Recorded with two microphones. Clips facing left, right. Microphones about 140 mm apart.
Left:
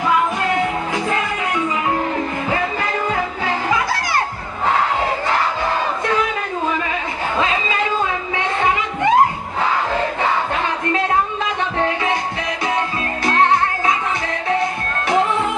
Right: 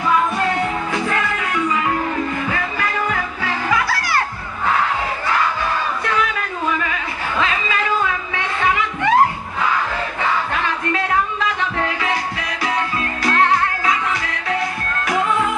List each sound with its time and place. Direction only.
2.5 s music: 25° left (ahead or behind)
5.3 s crowd: 25° left (ahead or behind)
6.7 s a sound: 25° left (ahead or behind)
13.2 s music: 25° left (ahead or behind)